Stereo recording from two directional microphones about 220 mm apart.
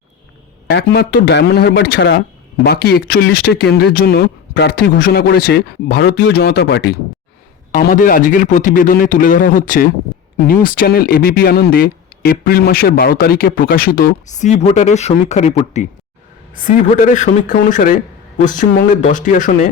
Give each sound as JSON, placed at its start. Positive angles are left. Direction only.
{"t": 0.7, "sound": "a man's voice", "side_deg": 50}